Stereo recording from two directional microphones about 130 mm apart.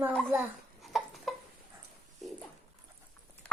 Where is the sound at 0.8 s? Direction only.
Centre (ahead or behind).